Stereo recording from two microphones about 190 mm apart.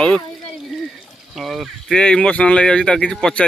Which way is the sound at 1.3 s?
Centre (ahead or behind).